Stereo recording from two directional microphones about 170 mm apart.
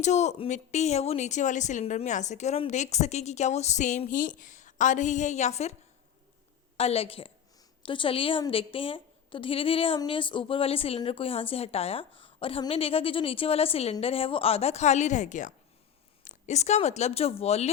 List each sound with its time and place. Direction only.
0.0 s speech: 40° left (ahead or behind)
6.7 s a woman's voice: 35° left (ahead or behind)